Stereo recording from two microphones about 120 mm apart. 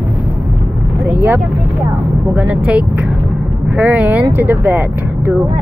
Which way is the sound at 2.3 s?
10° right (ahead or behind).